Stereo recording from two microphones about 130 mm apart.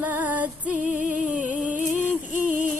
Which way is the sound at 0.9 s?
80° right.